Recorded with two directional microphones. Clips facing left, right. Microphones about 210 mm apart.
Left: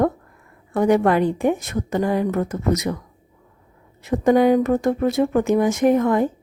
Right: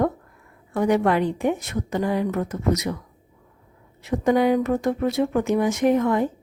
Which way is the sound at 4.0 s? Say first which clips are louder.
Left 4 dB; 45° left (ahead or behind).